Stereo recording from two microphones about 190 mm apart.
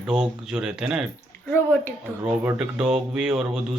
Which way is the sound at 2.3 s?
5° right (ahead or behind).